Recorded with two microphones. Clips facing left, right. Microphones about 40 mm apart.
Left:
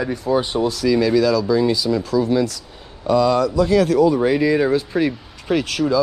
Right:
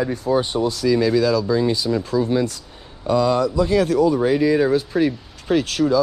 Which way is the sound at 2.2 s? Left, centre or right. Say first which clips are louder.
Left 2 dB; right.